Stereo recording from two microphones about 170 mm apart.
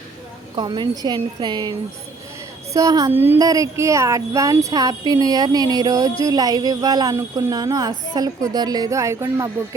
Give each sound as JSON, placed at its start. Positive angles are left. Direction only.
{"t": 0.5, "sound": "a woman's voice", "side_deg": -25}
{"t": 2.7, "sound": "a woman's voice", "side_deg": -20}